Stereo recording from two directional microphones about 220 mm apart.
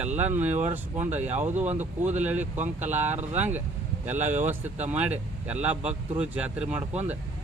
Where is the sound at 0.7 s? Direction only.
10° right (ahead or behind).